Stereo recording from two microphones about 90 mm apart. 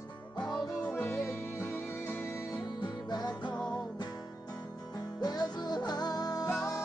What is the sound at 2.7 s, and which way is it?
Music, 50° left (ahead or behind).